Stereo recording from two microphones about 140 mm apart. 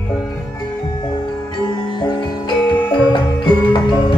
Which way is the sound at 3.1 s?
35° left (ahead or behind).